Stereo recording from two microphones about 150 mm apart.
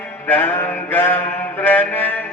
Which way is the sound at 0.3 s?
10° left (ahead or behind).